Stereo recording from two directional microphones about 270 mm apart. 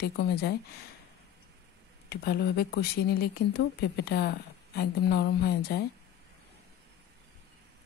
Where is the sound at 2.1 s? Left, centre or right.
Left.